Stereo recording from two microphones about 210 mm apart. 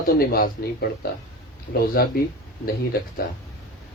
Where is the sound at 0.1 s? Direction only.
45° left (ahead or behind).